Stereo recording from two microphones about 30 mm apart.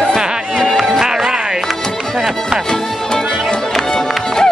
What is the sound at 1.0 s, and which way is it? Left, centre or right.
Music, centre.